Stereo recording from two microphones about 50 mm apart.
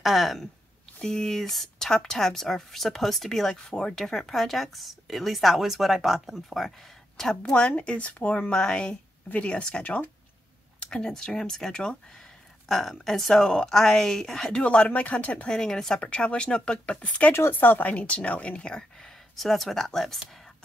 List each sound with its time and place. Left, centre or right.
0.0 s speech: centre
1.0 s speech: centre
7.4 s speech: left
10.8 s speech: centre
14.6 s speech: left
15.5 s speech: centre
16.0 s speech: left
17.3 s speech: left
17.6 s speech: left
17.9 s speech: left
19.3 s speech: centre